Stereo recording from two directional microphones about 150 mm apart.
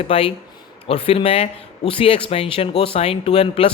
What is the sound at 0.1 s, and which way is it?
Speech, 40° left (ahead or behind).